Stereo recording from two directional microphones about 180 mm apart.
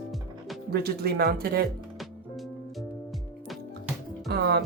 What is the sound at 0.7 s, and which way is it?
Speech, 60° right (ahead or behind).